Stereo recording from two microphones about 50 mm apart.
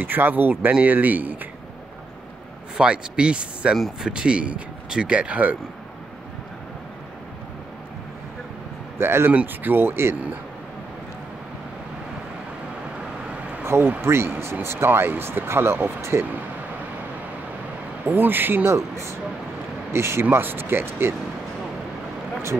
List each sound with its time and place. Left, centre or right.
0.0 s speech: right
2.8 s speech: centre
3.7 s speech: centre
4.1 s speech: centre
8.9 s speech: right
9.5 s speech: right
13.7 s speech: right
18.0 s speech: right
18.7 s speech: right
19.9 s speech: right
20.2 s speech: right